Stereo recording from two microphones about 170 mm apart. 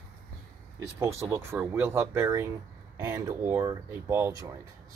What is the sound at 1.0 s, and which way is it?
Speech, 15° right (ahead or behind).